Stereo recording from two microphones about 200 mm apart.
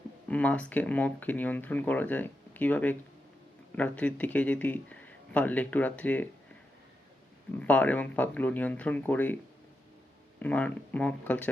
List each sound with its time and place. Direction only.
0.3 s speech: 5° left (ahead or behind)
7.6 s speech: 5° left (ahead or behind)
10.4 s speech: 5° left (ahead or behind)